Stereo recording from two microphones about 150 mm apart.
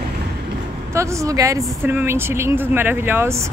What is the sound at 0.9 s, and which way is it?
Speech, 20° right (ahead or behind).